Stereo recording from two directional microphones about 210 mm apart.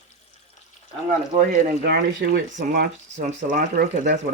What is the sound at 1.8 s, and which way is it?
Speech, 45° right (ahead or behind).